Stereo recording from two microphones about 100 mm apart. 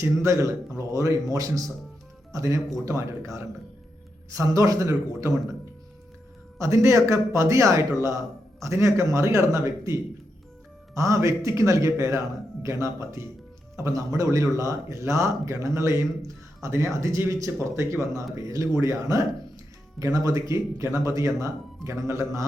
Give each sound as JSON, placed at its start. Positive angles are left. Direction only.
{"t": 0.0, "sound": "a man's voice", "side_deg": -30}
{"t": 6.6, "sound": "a man's voice", "side_deg": -30}